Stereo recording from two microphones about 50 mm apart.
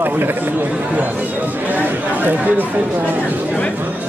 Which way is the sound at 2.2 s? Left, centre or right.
Right.